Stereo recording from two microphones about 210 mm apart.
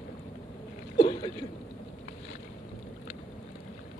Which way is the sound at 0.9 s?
25° left (ahead or behind).